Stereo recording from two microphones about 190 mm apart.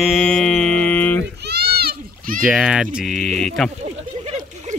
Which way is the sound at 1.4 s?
55° right (ahead or behind).